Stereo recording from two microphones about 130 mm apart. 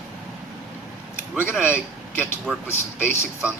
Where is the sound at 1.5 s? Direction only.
15° left (ahead or behind).